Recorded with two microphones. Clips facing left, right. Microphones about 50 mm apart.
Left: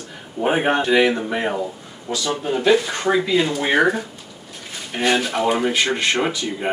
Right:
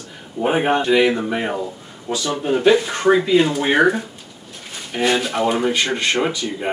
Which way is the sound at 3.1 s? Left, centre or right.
Centre.